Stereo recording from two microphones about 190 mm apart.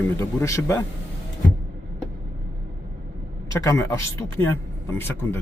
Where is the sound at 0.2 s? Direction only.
15° left (ahead or behind).